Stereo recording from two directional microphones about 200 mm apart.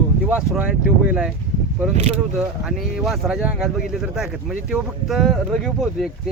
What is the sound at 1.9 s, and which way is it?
Speech, 35° right (ahead or behind).